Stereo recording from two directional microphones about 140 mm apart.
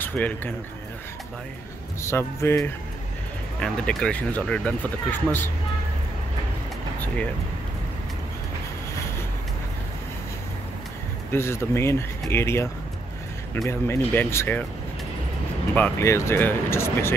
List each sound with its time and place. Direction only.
0.0 s speech: 15° left (ahead or behind)
2.0 s speech: 20° left (ahead or behind)
3.6 s speech: 5° left (ahead or behind)
11.3 s speech: 20° left (ahead or behind)
13.7 s speech: 15° left (ahead or behind)
15.7 s speech: 15° left (ahead or behind)